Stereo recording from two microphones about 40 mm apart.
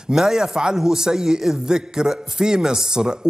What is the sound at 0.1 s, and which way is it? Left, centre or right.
Speech, centre.